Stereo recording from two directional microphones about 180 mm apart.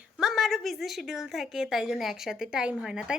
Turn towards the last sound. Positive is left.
turn(degrees=-5)  # may be behind; listen again after turning